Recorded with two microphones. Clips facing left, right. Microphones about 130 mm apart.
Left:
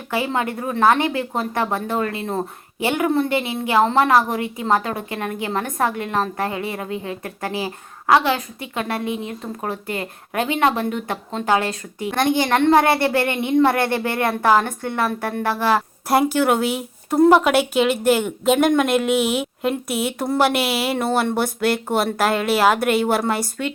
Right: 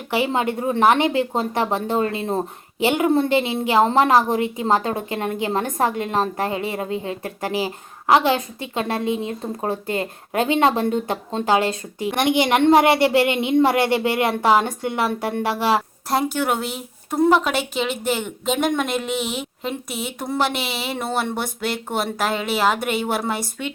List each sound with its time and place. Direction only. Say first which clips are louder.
0.1 s speech: right 2 dB; 20° right (ahead or behind)
16.0 s speech: left 5 dB; 5° left (ahead or behind)